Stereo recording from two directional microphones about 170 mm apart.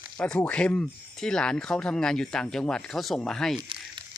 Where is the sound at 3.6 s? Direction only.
30° right (ahead or behind).